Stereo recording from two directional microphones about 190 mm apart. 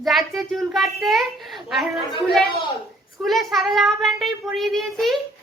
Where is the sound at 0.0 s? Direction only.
Centre (ahead or behind).